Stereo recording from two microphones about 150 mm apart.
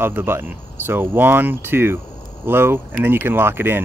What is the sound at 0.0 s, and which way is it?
Speech, 15° right (ahead or behind).